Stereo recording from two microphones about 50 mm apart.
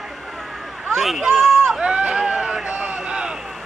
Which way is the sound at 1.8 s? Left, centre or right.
Right.